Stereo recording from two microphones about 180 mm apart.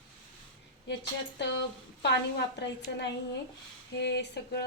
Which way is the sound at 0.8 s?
75° left (ahead or behind).